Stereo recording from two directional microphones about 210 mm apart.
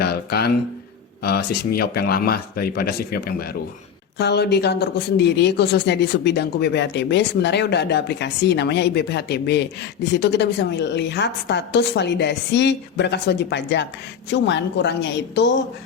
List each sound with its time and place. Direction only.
0.0 s speech: 50° left (ahead or behind)